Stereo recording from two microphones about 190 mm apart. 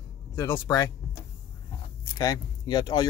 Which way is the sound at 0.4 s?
15° left (ahead or behind).